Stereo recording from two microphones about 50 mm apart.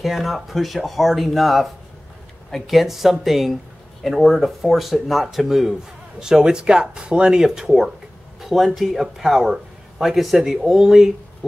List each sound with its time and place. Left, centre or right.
0.0 s speech: centre